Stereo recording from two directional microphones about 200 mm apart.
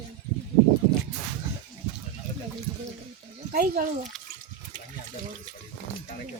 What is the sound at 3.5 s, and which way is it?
Speech, 45° right (ahead or behind).